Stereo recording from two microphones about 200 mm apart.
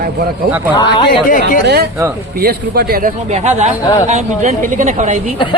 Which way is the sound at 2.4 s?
50° right (ahead or behind).